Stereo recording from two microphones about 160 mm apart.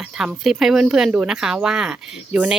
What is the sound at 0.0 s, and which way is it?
Speech, 5° right (ahead or behind).